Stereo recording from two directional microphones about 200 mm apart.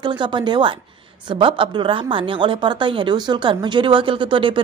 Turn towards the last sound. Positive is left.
turn(degrees=-25)  # may be behind; listen again after turning